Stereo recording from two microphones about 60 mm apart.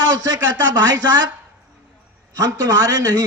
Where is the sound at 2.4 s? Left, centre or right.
Right.